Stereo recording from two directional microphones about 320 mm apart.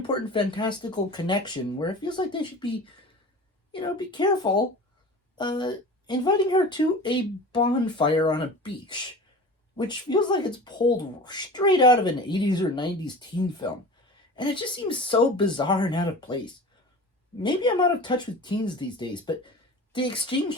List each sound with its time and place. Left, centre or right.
0.1 s speech: centre
3.7 s speech: centre
17.4 s speech: centre